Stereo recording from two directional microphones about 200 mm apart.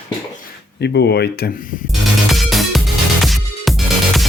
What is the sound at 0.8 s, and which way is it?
Speech, 55° left (ahead or behind).